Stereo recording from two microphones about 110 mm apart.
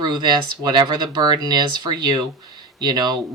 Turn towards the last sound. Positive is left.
turn(degrees=-40)  # may be behind; listen again after turning